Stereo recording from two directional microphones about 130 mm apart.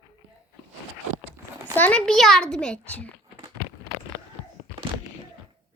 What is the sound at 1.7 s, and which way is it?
A child's voice, 10° left (ahead or behind).